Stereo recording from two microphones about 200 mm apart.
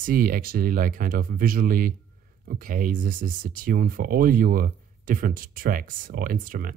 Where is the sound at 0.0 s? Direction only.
45° right (ahead or behind).